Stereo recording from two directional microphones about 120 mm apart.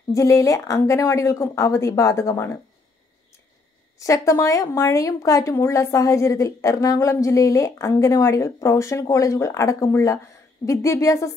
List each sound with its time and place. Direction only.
0.1 s a woman's voice: 25° left (ahead or behind)
4.0 s a woman's voice: 25° left (ahead or behind)